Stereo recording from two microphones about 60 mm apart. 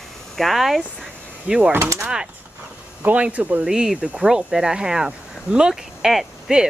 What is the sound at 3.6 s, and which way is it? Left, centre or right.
Speech, centre.